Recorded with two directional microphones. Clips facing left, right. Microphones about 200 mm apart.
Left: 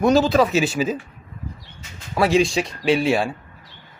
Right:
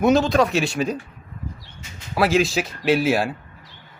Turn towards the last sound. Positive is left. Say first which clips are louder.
# even
turn(degrees=-5)  # may be behind; listen again after turning